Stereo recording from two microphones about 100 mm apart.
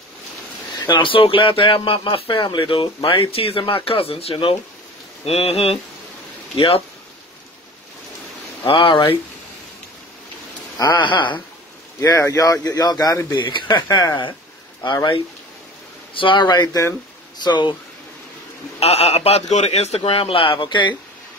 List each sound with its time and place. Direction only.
0.7 s speech: 50° left (ahead or behind); by 4.6 s 70° left (ahead or behind)
5.2 s a sound: 90° left
6.5 s speech: 70° left (ahead or behind)
8.6 s speech: 60° left (ahead or behind)
10.8 s speech: 50° left (ahead or behind)
12.0 s speech: 30° left (ahead or behind)
13.4 s speech: 50° left (ahead or behind)
13.8 s speech: 35° left (ahead or behind)
16.2 s speech: 55° left (ahead or behind); by 16.9 s 35° left (ahead or behind)
17.4 s speech: 50° left (ahead or behind)
18.8 s a man's voice: 90° left; by 20.9 s 50° left (ahead or behind)